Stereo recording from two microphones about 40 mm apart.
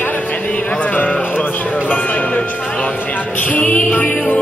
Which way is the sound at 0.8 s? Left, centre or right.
Left.